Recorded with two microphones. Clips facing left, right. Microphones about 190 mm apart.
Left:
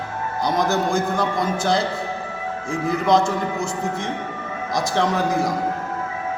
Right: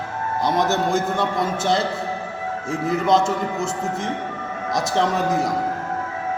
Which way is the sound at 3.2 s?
25° right (ahead or behind).